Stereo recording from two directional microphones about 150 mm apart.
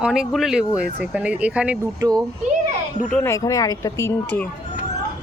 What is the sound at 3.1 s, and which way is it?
Speech, 10° left (ahead or behind).